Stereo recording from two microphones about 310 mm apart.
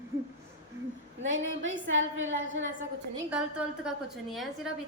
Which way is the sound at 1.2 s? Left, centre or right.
Right.